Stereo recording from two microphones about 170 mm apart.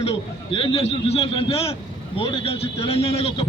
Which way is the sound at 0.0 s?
35° left (ahead or behind).